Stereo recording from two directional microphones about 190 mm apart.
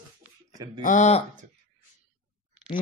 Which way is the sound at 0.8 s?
40° left (ahead or behind).